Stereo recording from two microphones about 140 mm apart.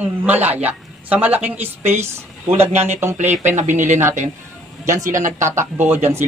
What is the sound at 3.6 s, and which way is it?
Speech, 60° right (ahead or behind).